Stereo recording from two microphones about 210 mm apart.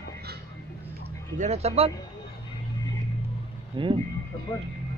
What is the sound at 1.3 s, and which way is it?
Speech, 30° right (ahead or behind).